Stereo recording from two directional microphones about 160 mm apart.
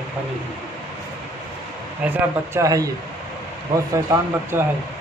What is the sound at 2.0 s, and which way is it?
Speech, 15° right (ahead or behind).